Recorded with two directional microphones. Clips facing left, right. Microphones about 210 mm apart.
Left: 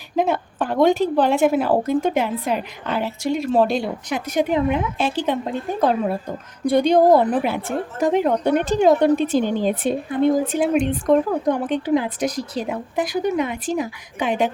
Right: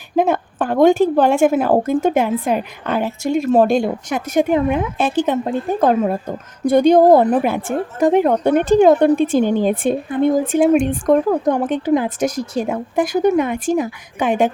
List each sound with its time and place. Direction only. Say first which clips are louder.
0.2 s a woman's voice: right 4 dB; 50° right (ahead or behind)